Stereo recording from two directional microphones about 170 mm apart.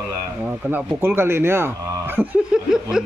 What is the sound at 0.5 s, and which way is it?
Speech, 10° right (ahead or behind).